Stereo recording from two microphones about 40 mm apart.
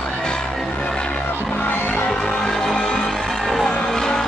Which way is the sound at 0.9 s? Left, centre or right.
Left.